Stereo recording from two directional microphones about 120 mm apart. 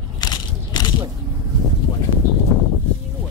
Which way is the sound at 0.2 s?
35° left (ahead or behind).